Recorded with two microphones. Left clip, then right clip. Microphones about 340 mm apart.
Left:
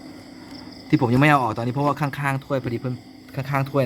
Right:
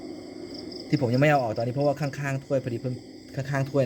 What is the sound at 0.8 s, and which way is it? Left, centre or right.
Speech, centre.